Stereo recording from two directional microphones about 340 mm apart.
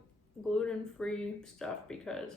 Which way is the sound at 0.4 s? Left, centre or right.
Centre.